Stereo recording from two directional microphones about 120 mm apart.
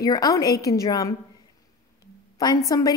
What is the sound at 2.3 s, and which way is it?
Speech, 35° left (ahead or behind).